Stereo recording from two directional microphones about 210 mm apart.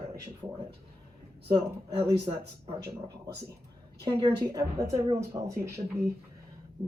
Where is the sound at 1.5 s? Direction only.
25° right (ahead or behind).